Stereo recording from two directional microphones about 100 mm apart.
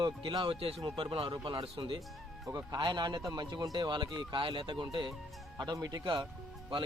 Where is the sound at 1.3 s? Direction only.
50° right (ahead or behind).